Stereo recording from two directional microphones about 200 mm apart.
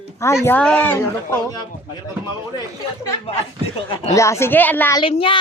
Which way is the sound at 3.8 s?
25° left (ahead or behind).